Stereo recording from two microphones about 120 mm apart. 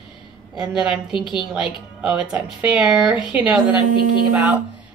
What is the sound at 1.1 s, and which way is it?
Speech, 40° left (ahead or behind).